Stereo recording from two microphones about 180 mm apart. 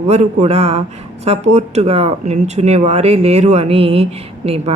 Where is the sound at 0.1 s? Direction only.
40° right (ahead or behind).